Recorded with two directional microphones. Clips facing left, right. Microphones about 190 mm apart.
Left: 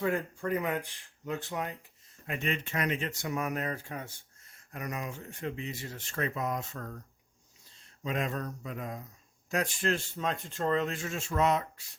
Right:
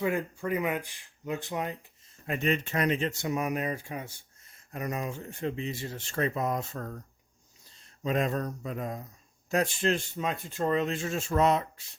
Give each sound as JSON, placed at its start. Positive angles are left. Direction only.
{"t": 0.0, "sound": "speech", "side_deg": -10}
{"t": 2.2, "sound": "speech", "side_deg": -40}
{"t": 8.0, "sound": "speech", "side_deg": -40}